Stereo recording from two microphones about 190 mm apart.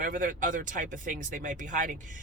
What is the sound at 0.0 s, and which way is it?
Speech, 45° right (ahead or behind).